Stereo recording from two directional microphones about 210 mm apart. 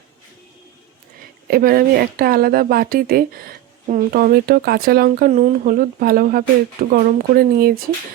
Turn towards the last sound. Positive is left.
turn(degrees=-45)  # may be behind; listen again after turning